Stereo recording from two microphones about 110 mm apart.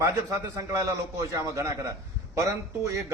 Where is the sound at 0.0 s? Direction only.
30° right (ahead or behind).